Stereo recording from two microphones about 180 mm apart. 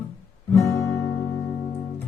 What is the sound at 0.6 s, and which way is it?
Guitar, 15° left (ahead or behind).